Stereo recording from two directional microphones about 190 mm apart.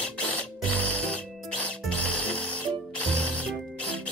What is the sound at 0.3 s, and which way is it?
Music, 10° left (ahead or behind).